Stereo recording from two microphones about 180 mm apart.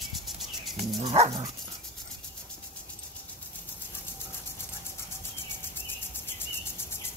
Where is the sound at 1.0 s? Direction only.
30° right (ahead or behind).